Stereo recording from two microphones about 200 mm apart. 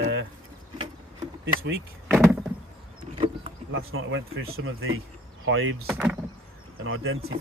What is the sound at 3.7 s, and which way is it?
Speech, 80° right.